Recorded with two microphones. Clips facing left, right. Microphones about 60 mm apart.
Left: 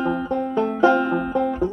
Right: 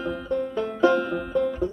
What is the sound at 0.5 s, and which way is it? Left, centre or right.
Banjo, left.